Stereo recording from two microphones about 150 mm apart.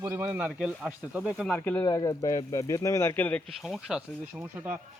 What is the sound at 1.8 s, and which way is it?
Speech, 25° left (ahead or behind).